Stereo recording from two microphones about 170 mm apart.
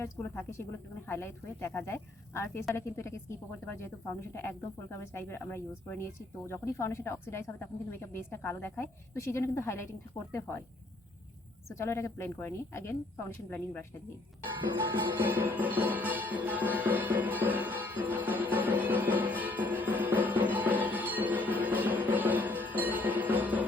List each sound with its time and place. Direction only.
0.0 s speech: 15° left (ahead or behind)
11.7 s speech: 15° left (ahead or behind)
15.2 s music: 10° right (ahead or behind)